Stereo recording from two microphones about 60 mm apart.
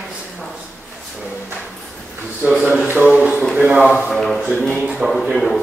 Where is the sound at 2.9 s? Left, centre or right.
Centre.